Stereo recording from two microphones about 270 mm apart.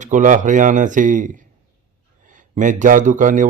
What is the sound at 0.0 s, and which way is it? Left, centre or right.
A man's voice, right.